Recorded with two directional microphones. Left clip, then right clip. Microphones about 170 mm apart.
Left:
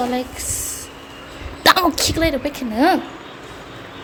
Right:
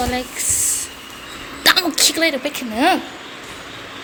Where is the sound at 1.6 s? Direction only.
30° left (ahead or behind).